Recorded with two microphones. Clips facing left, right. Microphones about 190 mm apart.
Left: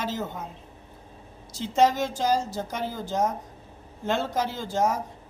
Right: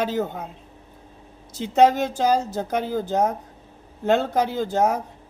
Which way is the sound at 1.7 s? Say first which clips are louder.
Right 5 dB; 60° right (ahead or behind).